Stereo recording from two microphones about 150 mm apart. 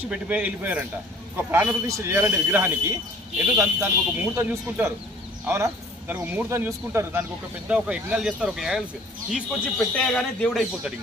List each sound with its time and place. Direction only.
0.1 s speech: 10° right (ahead or behind)